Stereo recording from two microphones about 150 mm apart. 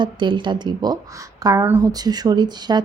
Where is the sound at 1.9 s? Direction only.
25° right (ahead or behind).